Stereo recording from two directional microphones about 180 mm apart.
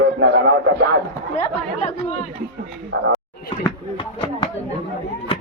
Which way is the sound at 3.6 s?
25° left (ahead or behind).